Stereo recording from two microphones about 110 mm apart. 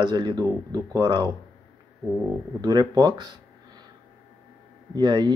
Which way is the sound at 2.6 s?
35° right (ahead or behind).